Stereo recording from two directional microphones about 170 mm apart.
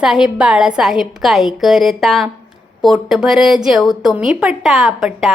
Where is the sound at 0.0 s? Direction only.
5° right (ahead or behind).